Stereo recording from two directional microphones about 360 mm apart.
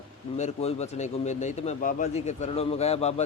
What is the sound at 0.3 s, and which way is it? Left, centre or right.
Speech, centre.